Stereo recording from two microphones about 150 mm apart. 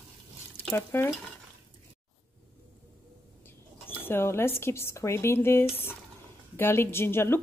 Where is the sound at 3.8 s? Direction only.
15° left (ahead or behind).